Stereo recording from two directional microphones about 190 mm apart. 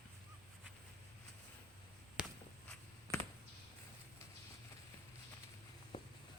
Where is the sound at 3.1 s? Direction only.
20° right (ahead or behind).